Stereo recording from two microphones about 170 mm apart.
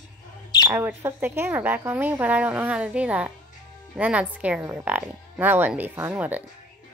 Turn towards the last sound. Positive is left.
turn(degrees=-10)  # may be behind; listen again after turning